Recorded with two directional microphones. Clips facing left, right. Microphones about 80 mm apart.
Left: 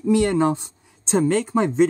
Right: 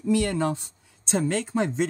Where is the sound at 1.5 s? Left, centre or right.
Left.